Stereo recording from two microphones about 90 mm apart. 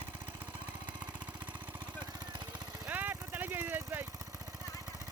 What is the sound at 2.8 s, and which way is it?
Vehicle, 20° right (ahead or behind).